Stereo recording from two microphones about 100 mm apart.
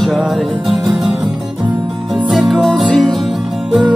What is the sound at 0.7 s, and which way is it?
Music, 35° right (ahead or behind).